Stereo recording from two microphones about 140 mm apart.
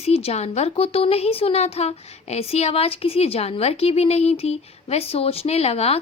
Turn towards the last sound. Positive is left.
turn(degrees=45)  # may be behind; listen again after turning